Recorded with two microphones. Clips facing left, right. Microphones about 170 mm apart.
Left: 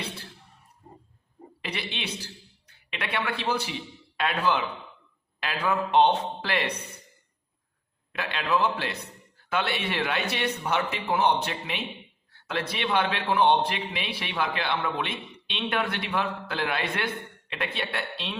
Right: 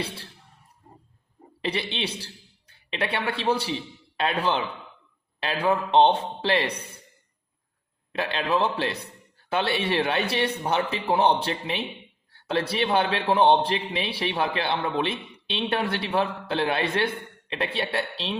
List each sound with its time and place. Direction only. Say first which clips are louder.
1.6 s a man's voice: right 6 dB; 30° right (ahead or behind)
8.1 s a man's voice: right 2 dB; 30° right (ahead or behind)